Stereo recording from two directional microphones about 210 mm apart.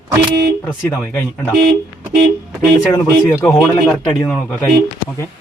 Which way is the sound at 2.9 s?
10° left (ahead or behind).